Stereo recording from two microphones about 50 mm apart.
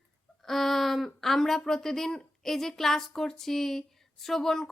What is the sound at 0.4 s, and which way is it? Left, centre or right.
Speech, centre.